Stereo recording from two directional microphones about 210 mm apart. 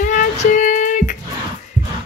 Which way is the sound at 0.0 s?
35° left (ahead or behind).